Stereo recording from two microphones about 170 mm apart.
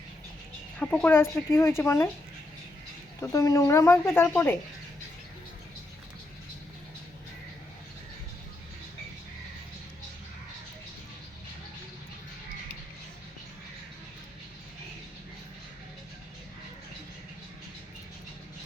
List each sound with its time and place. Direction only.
0.8 s speech: 10° left (ahead or behind)
3.2 s speech: 20° left (ahead or behind)